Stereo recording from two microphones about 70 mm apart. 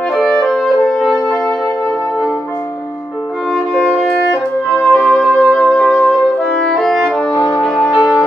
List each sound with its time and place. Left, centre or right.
0.1 s music: centre
3.5 s music: centre
6.0 s brass instrument: centre
7.3 s music: left
7.6 s music: centre